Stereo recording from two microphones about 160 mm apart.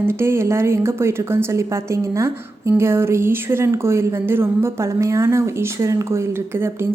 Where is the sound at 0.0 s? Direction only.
15° right (ahead or behind).